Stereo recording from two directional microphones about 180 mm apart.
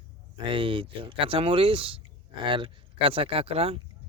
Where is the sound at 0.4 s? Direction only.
30° right (ahead or behind).